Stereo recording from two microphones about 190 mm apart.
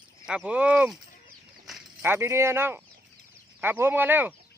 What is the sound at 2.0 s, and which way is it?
Speech, 10° right (ahead or behind).